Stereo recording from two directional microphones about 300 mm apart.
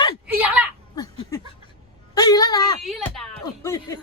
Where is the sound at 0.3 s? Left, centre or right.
Centre.